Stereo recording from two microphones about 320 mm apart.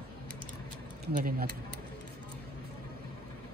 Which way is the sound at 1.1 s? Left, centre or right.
Right.